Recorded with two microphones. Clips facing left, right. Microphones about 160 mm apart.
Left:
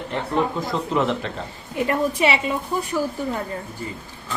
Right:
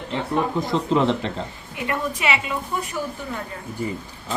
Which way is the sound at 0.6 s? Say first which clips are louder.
Right 2 dB; 25° right (ahead or behind).